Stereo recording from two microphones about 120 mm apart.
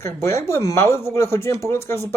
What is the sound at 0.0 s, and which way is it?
A man's voice, 25° left (ahead or behind).